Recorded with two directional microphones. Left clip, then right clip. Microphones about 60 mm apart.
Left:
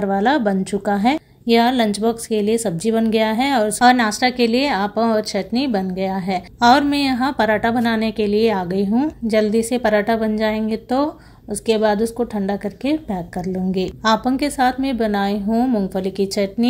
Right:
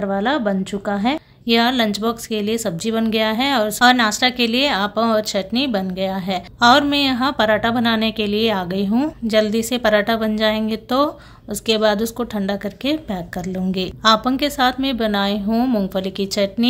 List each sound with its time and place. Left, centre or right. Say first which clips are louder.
0.0 s a woman's voice: left 2 dB; left
15.5 s a woman's voice: left 1 dB; centre
15.9 s a woman's voice: left 1 dB; left